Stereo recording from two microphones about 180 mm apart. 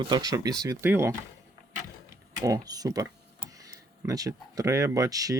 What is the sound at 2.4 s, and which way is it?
Speech, 20° right (ahead or behind).